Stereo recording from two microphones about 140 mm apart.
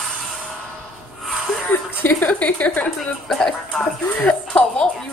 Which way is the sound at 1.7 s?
15° left (ahead or behind).